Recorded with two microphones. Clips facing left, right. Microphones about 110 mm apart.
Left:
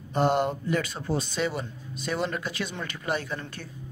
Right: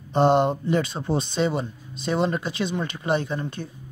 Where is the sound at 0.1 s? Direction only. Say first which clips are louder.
Right 5 dB; 25° right (ahead or behind).